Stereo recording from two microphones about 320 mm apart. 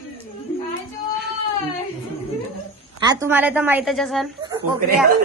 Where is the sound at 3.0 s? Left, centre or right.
Centre.